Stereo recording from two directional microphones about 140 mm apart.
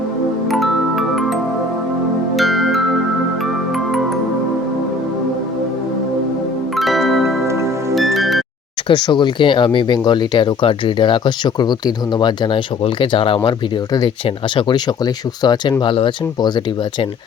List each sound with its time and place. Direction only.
0.5 s music: centre (ahead or behind)
6.7 s music: centre (ahead or behind)
7.4 s music: 20° right (ahead or behind)
7.9 s music: centre (ahead or behind)
8.9 s speech: 30° left (ahead or behind)